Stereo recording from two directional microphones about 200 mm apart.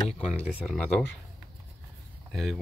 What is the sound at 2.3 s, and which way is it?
Speech, centre (ahead or behind).